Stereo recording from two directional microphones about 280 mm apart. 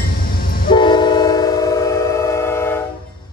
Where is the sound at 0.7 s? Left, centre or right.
Centre.